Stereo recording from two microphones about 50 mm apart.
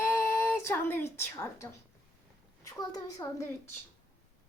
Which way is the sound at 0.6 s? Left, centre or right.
Left.